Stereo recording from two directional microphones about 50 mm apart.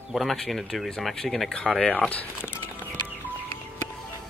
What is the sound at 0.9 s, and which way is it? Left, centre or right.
Speech, centre.